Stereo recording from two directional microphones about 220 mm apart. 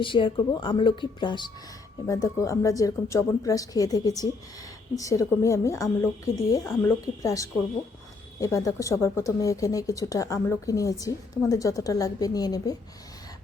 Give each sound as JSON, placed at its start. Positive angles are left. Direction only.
{"t": 0.0, "sound": "speech", "side_deg": 20}